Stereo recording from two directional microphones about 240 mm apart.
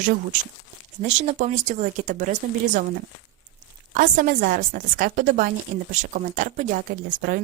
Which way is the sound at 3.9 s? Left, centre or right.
Right.